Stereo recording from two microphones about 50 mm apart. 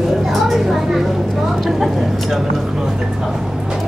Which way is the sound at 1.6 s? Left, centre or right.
Centre.